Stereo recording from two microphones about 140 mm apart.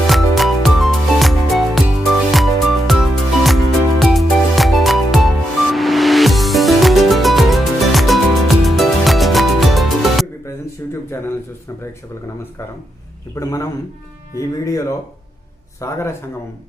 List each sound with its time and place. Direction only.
0.0 s music: centre (ahead or behind)
10.4 s a sound: 20° left (ahead or behind)
13.3 s a man's voice: 25° left (ahead or behind)